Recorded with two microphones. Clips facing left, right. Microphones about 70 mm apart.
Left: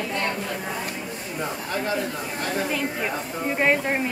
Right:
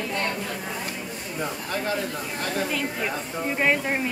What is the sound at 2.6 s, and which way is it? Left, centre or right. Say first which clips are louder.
Speech: left 1 dB; centre.